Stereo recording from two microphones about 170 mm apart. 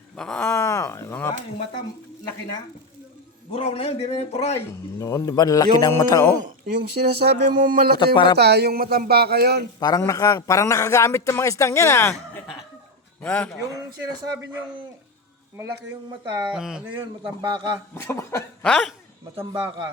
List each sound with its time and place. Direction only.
0.2 s speech: 5° left (ahead or behind)
0.4 s speech: 15° left (ahead or behind)
3.5 s speech: 35° left (ahead or behind)
4.9 s speech: 20° left (ahead or behind)
6.7 s speech: 70° right (ahead or behind); by 7.9 s 55° right (ahead or behind)
7.9 s speech: 30° left (ahead or behind)
8.4 s speech: 75° right (ahead or behind)
10.0 s speech: 20° left (ahead or behind)
16.5 s speech: 5° right (ahead or behind)
16.9 s a man's voice: 30° right (ahead or behind)
17.9 s speech: 15° left (ahead or behind)
18.6 s speech: centre (ahead or behind)
19.4 s a man's voice: 30° right (ahead or behind)